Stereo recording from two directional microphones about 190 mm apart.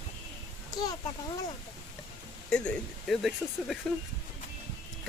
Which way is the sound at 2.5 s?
5° left (ahead or behind).